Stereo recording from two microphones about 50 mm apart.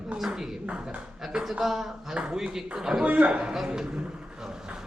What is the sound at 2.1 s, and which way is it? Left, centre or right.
Speech, right.